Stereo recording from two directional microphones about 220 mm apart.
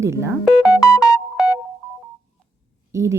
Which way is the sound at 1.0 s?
15° left (ahead or behind).